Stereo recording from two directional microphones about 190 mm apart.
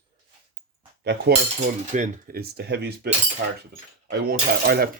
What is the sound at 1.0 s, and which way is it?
Cutlery, 65° right (ahead or behind).